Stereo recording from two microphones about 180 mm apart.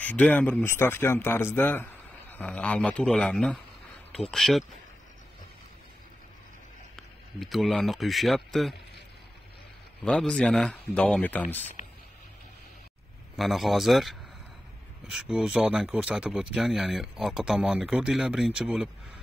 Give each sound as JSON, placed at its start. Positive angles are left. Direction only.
{"t": 0.0, "sound": "a man's voice", "side_deg": 10}
{"t": 7.0, "sound": "speech", "side_deg": 0}
{"t": 10.0, "sound": "speech", "side_deg": 5}
{"t": 11.8, "sound": "vehicle", "side_deg": 40}
{"t": 13.4, "sound": "speech", "side_deg": 0}